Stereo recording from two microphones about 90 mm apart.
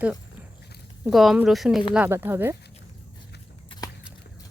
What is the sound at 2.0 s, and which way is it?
Speech, 25° right (ahead or behind).